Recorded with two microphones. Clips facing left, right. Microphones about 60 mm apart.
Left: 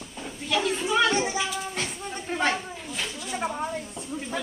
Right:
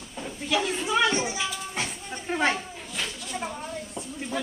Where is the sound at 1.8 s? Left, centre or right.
Centre.